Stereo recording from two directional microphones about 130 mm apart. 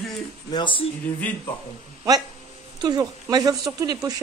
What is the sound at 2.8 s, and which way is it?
A woman's voice, 30° right (ahead or behind).